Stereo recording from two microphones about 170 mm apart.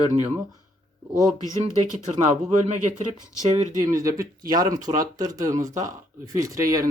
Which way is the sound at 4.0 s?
20° right (ahead or behind).